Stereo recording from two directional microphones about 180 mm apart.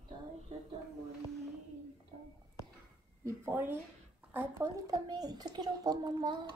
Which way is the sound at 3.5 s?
10° right (ahead or behind).